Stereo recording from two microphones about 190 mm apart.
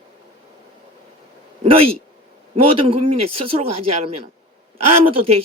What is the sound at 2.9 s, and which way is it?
Speech, 30° right (ahead or behind).